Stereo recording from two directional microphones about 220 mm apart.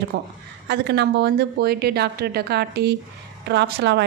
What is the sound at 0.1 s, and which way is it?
A woman's voice, 50° right (ahead or behind).